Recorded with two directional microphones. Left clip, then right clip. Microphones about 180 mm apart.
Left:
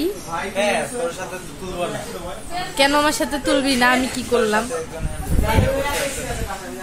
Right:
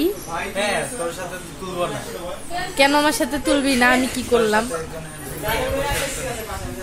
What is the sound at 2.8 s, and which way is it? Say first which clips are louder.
A woman's voice: even; centre (ahead or behind).